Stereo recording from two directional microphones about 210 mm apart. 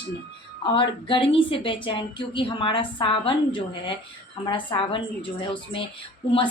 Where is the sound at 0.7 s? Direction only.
25° left (ahead or behind).